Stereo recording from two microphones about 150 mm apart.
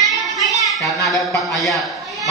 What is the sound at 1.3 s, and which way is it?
Speech, centre (ahead or behind).